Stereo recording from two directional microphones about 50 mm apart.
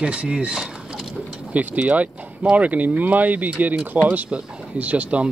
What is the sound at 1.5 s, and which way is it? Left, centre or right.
Speech, right.